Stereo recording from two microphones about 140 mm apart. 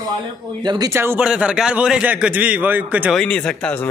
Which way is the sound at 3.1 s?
5° left (ahead or behind).